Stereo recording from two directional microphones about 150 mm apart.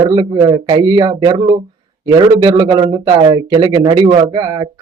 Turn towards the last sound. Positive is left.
turn(degrees=-25)  # may be behind; listen again after turning